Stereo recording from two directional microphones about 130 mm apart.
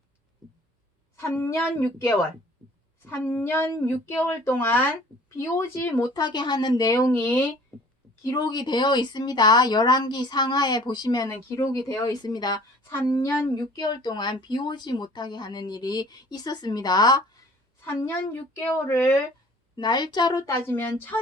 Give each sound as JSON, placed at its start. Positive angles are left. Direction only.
{"t": 1.1, "sound": "a woman's voice", "side_deg": 20}
{"t": 6.1, "sound": "speech", "side_deg": 35}
{"t": 12.9, "sound": "a woman's voice", "side_deg": 20}
{"t": 13.5, "sound": "speech", "side_deg": 30}
{"t": 18.9, "sound": "a woman's voice", "side_deg": 25}
{"t": 19.7, "sound": "a woman's voice", "side_deg": 35}